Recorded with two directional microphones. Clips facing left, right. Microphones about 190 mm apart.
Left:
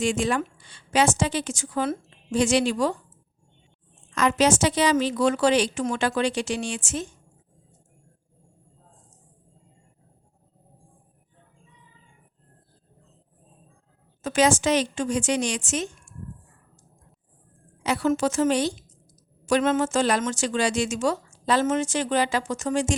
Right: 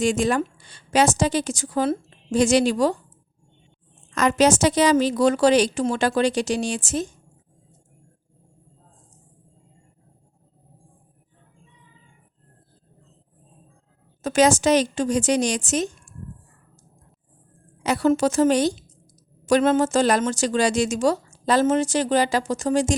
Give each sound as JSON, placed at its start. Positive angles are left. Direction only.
{"t": 0.0, "sound": "speech", "side_deg": -40}
{"t": 4.1, "sound": "speech", "side_deg": -45}
{"t": 14.2, "sound": "speech", "side_deg": -40}
{"t": 17.8, "sound": "speech", "side_deg": -40}